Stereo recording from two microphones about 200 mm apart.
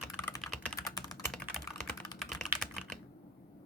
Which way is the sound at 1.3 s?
5° left (ahead or behind).